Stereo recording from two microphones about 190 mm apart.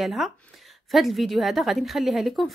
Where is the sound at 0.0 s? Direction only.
Centre (ahead or behind).